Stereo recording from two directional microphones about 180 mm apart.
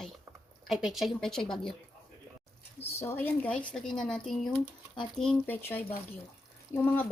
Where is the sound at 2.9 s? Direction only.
10° left (ahead or behind).